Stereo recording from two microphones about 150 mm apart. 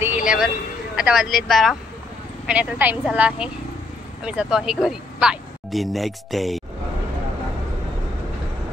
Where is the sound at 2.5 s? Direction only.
10° right (ahead or behind).